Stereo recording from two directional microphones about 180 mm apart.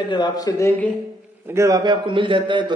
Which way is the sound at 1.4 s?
15° right (ahead or behind).